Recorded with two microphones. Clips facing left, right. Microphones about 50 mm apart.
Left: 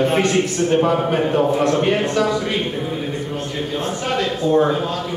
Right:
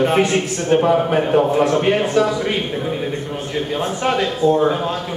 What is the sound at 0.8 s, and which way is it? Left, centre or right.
A man's voice, centre.